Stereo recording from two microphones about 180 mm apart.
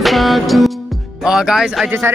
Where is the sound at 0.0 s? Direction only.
Centre (ahead or behind).